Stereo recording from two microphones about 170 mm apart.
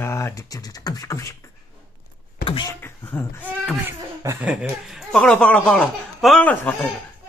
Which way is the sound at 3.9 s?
15° right (ahead or behind).